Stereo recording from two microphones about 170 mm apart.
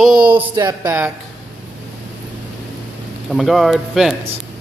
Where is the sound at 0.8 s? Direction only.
10° right (ahead or behind).